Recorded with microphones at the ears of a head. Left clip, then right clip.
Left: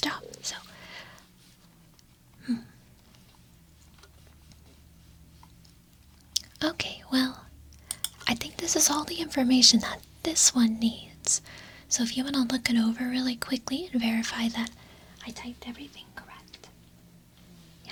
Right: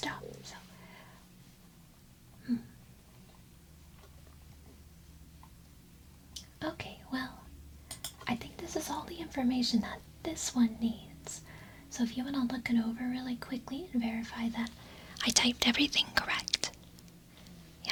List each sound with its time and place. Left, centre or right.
0.0 s whispering: left
6.3 s whispering: left
8.0 s speech: left
15.1 s speech: right